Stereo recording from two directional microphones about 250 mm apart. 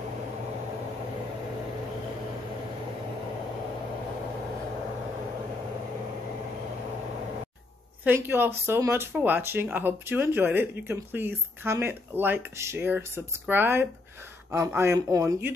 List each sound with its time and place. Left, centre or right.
8.0 s speech: centre